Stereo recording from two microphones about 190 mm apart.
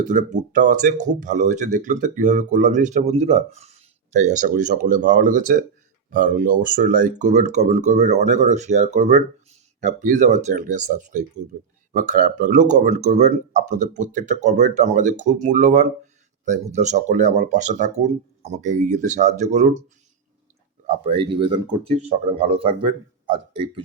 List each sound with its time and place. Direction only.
0.0 s speech: 40° right (ahead or behind)
20.8 s speech: 30° right (ahead or behind)